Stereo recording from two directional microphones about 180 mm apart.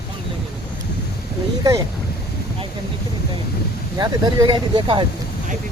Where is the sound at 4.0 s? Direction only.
25° right (ahead or behind).